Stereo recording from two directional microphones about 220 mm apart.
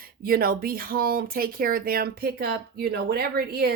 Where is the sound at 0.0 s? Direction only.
40° right (ahead or behind).